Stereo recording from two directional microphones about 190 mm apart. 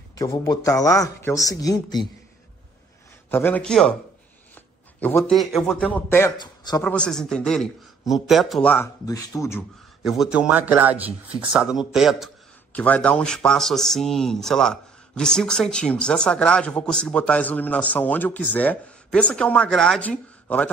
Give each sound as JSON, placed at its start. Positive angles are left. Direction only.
{"t": 0.2, "sound": "speech", "side_deg": 20}
{"t": 3.3, "sound": "a man's voice", "side_deg": 10}
{"t": 6.8, "sound": "speech", "side_deg": 5}
{"t": 10.0, "sound": "a man's voice", "side_deg": 0}